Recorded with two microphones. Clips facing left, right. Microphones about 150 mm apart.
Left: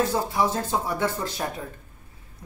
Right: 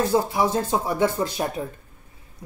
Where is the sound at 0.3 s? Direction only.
15° right (ahead or behind).